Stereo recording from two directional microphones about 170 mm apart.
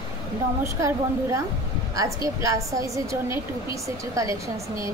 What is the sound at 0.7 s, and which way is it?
A woman's voice, 15° right (ahead or behind).